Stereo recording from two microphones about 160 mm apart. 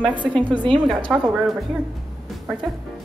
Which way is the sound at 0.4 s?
30° right (ahead or behind).